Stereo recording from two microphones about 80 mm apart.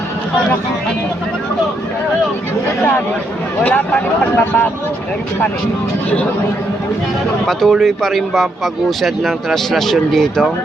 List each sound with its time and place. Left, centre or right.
3.6 s speech: centre
7.4 s speech: centre